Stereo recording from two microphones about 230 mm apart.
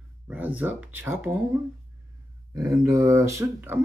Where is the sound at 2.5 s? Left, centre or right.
Centre.